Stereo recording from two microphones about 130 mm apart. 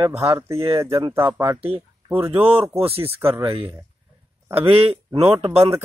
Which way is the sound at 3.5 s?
40° right (ahead or behind).